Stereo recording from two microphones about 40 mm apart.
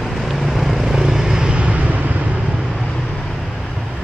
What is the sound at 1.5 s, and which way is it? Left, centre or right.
Vehicle, right.